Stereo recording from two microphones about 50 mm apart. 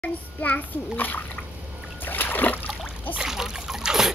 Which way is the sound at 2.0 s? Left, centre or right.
Left.